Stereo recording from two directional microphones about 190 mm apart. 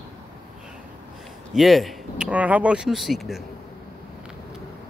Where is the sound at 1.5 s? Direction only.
Centre (ahead or behind).